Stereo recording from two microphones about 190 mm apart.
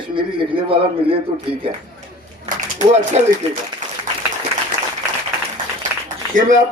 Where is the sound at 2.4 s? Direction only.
40° right (ahead or behind).